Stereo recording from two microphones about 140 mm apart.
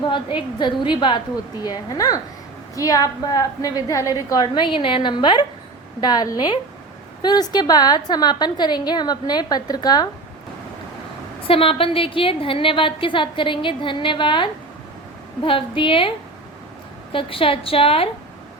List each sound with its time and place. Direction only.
0.0 s a woman's voice: 35° left (ahead or behind)
11.4 s a woman's voice: 40° left (ahead or behind)